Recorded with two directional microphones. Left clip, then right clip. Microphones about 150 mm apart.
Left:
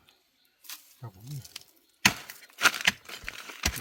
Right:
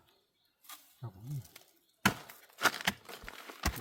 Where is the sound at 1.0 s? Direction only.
10° left (ahead or behind).